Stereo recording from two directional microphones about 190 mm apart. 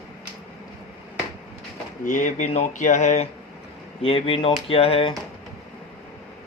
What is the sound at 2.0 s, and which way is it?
Speech, 40° left (ahead or behind).